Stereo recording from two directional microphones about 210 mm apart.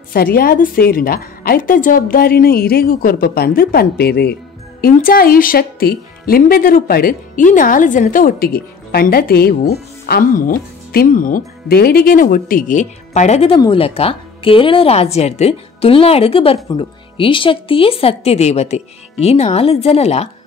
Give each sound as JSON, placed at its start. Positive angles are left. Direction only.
{"t": 0.1, "sound": "a woman's voice", "side_deg": 45}